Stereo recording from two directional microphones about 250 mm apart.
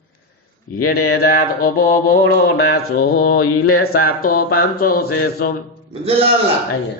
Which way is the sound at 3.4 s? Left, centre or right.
Left.